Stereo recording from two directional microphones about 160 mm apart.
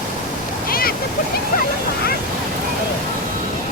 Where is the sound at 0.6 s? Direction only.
65° left (ahead or behind).